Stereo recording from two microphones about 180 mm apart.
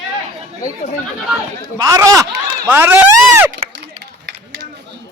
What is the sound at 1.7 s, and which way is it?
Speech, 20° right (ahead or behind).